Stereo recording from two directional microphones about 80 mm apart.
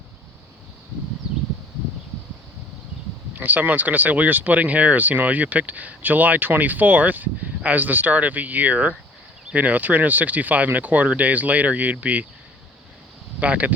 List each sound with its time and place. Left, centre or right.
3.3 s speech: right
13.4 s speech: centre